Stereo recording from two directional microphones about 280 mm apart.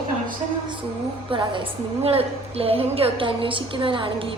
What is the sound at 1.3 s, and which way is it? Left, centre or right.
A woman's voice, centre.